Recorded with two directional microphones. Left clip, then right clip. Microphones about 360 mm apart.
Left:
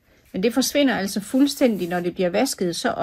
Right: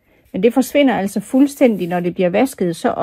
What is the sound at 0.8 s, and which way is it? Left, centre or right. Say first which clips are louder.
A woman's voice: right 5 dB; centre.